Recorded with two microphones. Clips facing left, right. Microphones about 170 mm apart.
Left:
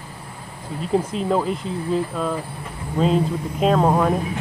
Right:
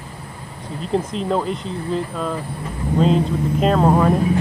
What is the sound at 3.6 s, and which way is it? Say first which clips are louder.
Speech: right 1 dB; centre (ahead or behind).